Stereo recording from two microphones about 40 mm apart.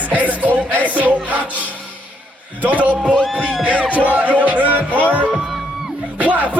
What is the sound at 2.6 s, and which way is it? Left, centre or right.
Music, right.